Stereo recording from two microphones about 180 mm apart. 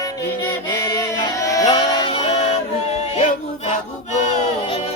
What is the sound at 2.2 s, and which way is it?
Music, 35° left (ahead or behind).